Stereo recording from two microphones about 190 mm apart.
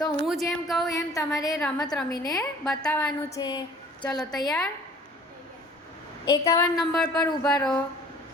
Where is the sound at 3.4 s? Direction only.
20° left (ahead or behind).